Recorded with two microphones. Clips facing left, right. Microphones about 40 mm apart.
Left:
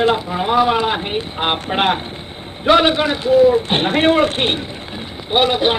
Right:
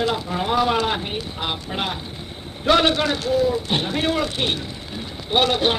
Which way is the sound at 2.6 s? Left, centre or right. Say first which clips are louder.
Left 4 dB; left.